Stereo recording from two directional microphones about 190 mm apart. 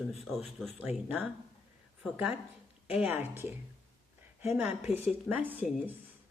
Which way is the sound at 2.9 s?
10° right (ahead or behind).